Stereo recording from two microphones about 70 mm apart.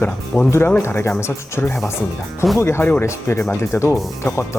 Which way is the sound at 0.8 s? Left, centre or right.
Left.